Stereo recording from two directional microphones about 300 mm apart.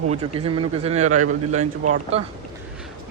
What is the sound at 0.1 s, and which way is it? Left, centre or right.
Speech, centre.